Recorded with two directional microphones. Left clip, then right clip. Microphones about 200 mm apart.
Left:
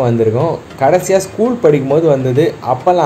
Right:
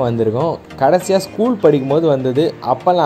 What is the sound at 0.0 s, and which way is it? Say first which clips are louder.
Speech: left 3 dB; 30° right (ahead or behind).